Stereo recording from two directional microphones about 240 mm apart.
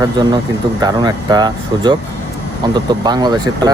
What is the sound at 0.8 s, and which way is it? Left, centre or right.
Speech, centre.